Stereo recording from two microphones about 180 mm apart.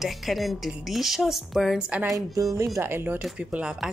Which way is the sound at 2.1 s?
20° right (ahead or behind).